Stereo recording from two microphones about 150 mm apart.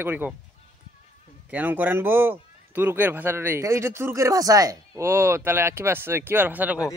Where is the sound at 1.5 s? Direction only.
10° right (ahead or behind).